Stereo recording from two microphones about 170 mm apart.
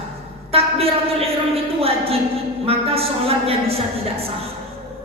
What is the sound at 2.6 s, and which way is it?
A woman's voice, 35° right (ahead or behind).